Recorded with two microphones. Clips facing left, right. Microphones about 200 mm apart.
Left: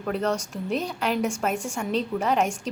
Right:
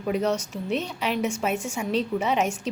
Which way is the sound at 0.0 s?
10° right (ahead or behind).